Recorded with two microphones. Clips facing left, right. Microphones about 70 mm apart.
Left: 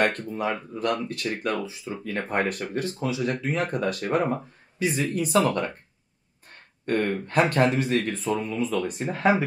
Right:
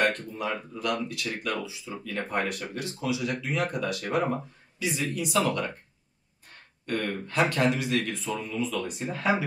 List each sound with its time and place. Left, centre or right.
0.0 s speech: left
6.9 s speech: left